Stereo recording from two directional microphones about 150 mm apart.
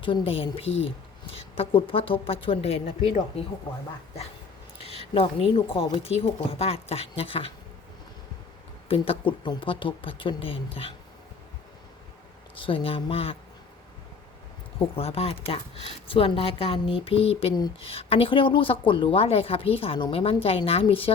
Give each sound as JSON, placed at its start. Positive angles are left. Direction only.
{"t": 0.0, "sound": "a woman's voice", "side_deg": 35}
{"t": 4.8, "sound": "a woman's voice", "side_deg": 40}
{"t": 8.9, "sound": "a woman's voice", "side_deg": 35}
{"t": 12.5, "sound": "a woman's voice", "side_deg": 35}
{"t": 14.9, "sound": "a woman's voice", "side_deg": 40}